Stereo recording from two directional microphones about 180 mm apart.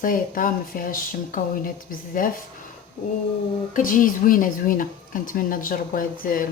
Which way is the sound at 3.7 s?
50° left (ahead or behind).